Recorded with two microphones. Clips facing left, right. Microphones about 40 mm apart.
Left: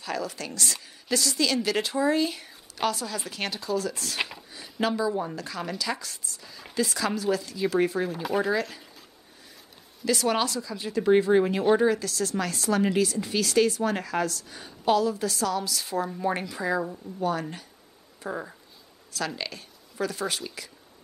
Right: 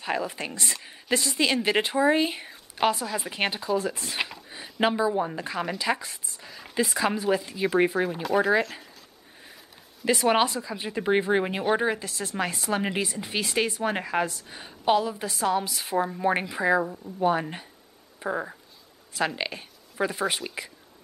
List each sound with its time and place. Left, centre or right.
0.0 s speech: right
4.2 s speech: centre
4.5 s speech: right
10.0 s speech: right
16.8 s a woman's voice: centre
17.2 s speech: right